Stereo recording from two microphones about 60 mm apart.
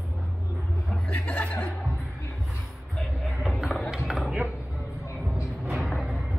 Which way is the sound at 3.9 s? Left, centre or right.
Centre.